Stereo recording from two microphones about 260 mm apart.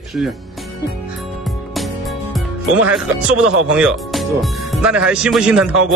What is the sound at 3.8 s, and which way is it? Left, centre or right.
Speech, centre.